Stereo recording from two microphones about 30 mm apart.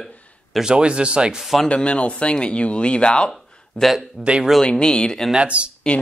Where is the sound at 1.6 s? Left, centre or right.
Left.